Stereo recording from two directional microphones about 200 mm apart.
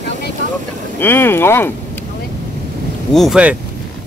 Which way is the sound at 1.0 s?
10° left (ahead or behind).